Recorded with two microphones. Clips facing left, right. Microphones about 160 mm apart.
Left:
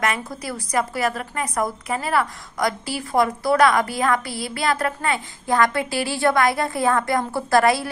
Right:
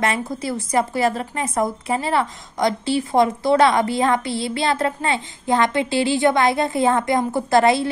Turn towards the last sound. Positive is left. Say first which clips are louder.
# right 2 dB
turn(degrees=-25)  # may be behind; listen again after turning